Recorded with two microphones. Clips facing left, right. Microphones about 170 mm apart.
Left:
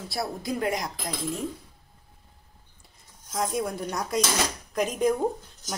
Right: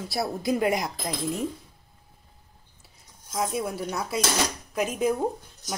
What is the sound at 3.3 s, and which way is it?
Speech, 5° right (ahead or behind).